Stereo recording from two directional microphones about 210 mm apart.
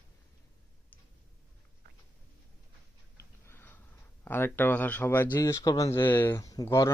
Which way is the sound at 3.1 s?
10° left (ahead or behind).